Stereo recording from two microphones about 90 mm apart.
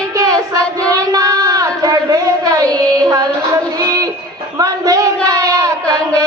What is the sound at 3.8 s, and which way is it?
Child singing, 40° right (ahead or behind).